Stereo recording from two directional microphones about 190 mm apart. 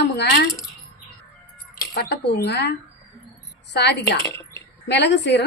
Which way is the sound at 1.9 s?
60° left (ahead or behind).